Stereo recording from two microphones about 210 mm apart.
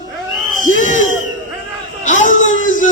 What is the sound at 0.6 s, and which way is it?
Crowd, 35° left (ahead or behind).